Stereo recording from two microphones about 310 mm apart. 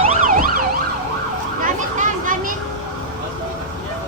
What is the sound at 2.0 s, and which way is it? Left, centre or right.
Children playing, right.